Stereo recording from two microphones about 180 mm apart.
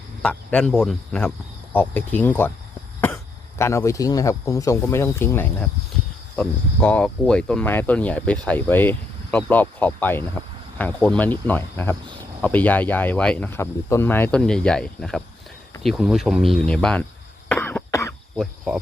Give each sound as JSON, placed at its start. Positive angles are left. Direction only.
{"t": 0.2, "sound": "speech", "side_deg": 5}
{"t": 3.6, "sound": "speech", "side_deg": 15}
{"t": 17.5, "sound": "cough", "side_deg": 10}
{"t": 18.3, "sound": "cricket", "side_deg": 0}